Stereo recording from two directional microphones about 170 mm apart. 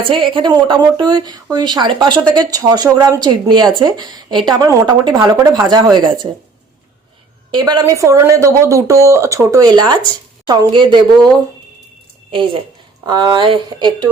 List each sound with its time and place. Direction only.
0.0 s speech: 30° right (ahead or behind)
7.5 s speech: 25° right (ahead or behind)
13.1 s speech: 25° right (ahead or behind)